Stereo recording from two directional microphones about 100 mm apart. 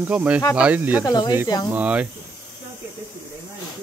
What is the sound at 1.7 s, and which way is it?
Speech, 15° right (ahead or behind).